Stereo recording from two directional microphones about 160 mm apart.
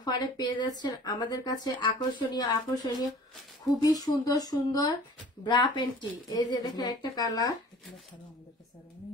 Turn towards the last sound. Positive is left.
turn(degrees=25)  # may be behind; listen again after turning